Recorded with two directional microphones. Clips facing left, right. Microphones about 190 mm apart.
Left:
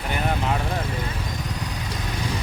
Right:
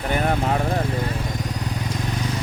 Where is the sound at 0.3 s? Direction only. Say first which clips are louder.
Even; 40° right (ahead or behind).